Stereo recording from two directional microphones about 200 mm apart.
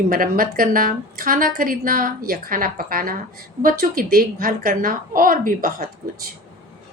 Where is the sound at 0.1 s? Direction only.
45° right (ahead or behind).